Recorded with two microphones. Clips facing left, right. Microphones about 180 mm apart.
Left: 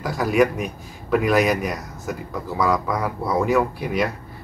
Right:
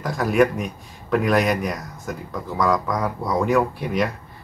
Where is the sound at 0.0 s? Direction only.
Centre (ahead or behind).